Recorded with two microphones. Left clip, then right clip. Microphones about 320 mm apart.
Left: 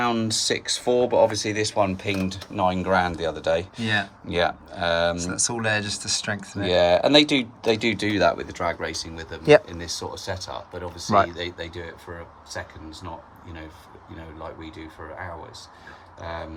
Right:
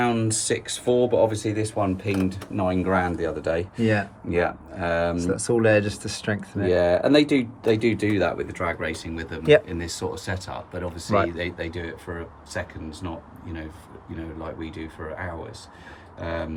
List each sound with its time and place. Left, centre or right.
0.0 s speech: left
5.3 s speech: centre
6.7 s speech: centre
14.4 s speech: centre